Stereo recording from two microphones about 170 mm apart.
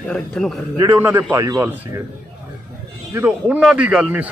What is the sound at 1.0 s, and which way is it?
Speech, 10° right (ahead or behind).